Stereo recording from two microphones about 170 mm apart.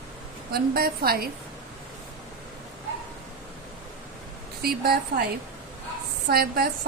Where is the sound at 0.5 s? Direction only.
65° right (ahead or behind).